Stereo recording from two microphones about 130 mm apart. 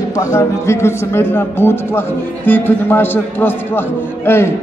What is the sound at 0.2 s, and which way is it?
A man's voice, 20° left (ahead or behind).